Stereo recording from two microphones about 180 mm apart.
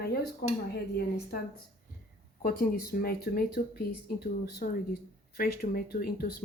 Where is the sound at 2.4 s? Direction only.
55° left (ahead or behind).